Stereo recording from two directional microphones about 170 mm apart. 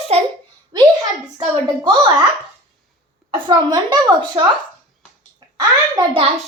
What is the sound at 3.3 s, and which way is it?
A woman's voice, 25° right (ahead or behind).